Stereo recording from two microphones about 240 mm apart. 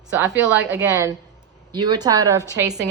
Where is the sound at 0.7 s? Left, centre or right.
Centre.